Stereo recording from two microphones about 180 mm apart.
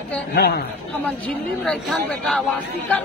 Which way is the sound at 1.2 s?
5° left (ahead or behind).